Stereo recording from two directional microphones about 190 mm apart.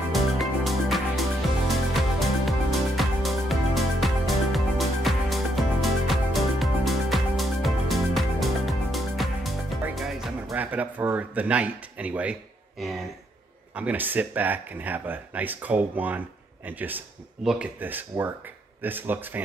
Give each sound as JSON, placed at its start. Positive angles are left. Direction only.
{"t": 0.1, "sound": "music", "side_deg": 0}
{"t": 13.7, "sound": "speech", "side_deg": -10}